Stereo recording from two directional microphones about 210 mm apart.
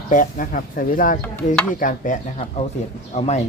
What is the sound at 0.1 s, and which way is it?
Speech, 40° left (ahead or behind).